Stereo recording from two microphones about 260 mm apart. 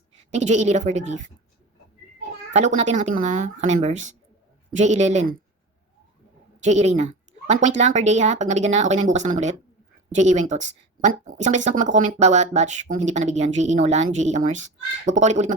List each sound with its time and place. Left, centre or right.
0.3 s speech: right
2.5 s speech: right
6.6 s speech: right